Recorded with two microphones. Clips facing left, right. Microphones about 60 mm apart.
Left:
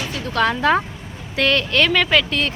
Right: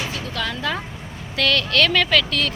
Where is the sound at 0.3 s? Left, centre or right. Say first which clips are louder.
Left 10 dB; left.